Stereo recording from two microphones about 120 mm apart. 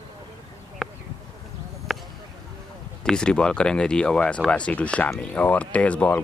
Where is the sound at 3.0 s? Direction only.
5° left (ahead or behind).